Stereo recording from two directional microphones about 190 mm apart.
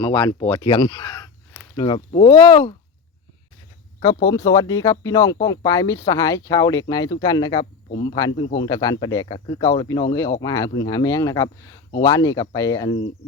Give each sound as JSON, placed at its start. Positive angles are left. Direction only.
{"t": 0.0, "sound": "speech", "side_deg": 25}
{"t": 4.3, "sound": "speech", "side_deg": 20}